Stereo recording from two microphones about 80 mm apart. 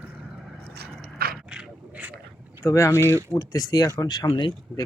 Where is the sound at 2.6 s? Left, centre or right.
Left.